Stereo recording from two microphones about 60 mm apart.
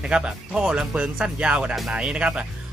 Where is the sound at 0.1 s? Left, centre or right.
Centre.